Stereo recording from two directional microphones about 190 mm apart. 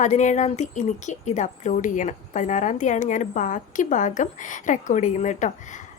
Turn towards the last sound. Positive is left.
turn(degrees=40)  # may be behind; listen again after turning